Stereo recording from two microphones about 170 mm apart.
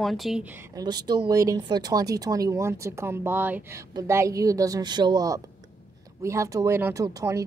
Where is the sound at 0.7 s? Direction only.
25° right (ahead or behind).